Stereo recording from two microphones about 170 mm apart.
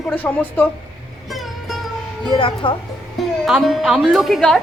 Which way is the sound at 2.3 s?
30° left (ahead or behind).